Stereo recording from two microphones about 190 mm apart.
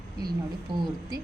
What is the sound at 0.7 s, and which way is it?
Speech, 25° right (ahead or behind).